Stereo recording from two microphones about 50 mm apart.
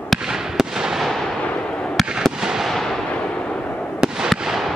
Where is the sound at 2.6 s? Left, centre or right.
Centre.